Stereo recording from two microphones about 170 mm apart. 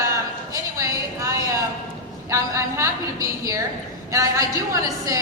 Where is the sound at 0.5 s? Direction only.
20° right (ahead or behind).